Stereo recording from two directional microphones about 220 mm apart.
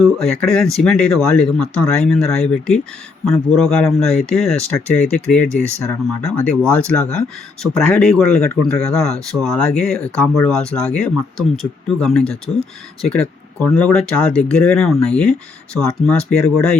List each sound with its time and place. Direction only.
0.0 s speech: centre (ahead or behind)